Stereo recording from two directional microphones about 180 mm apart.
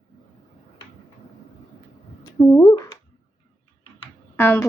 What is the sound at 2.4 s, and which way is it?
Speech, 20° left (ahead or behind).